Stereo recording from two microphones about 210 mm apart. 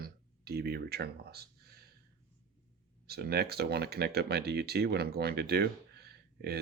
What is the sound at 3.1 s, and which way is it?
Speech, 50° right (ahead or behind).